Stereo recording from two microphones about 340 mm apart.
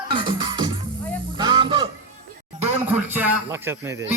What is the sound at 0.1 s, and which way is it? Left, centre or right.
Music, centre.